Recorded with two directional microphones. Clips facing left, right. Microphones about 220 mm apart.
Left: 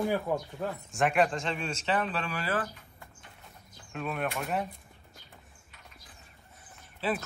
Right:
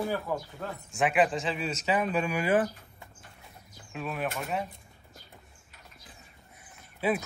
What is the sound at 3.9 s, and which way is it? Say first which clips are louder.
Speech: even; centre (ahead or behind).